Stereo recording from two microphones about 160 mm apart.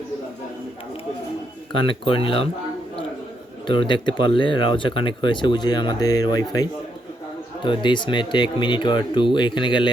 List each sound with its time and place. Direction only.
1.9 s speech: 35° left (ahead or behind)
3.7 s speech: 30° left (ahead or behind)